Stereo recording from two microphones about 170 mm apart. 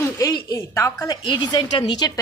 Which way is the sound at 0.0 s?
20° left (ahead or behind).